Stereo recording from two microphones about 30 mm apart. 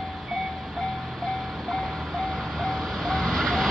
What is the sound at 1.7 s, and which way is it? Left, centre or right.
Vehicle, centre.